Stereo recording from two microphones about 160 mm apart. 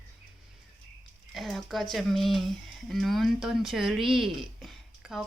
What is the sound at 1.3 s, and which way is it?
Speech, centre (ahead or behind).